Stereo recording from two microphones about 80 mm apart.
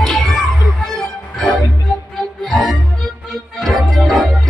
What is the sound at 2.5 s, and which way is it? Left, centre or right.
Music, centre.